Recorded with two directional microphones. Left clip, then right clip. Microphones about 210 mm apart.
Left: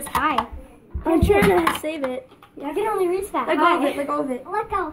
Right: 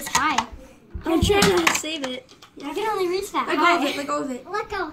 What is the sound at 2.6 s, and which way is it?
A woman's voice, 25° right (ahead or behind).